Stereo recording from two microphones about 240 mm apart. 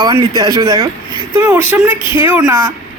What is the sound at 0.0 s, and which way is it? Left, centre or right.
Speech, centre.